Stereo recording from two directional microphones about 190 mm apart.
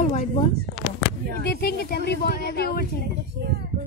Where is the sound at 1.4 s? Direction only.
55° left (ahead or behind).